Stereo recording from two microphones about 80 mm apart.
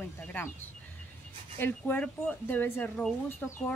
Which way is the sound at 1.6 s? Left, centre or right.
Left.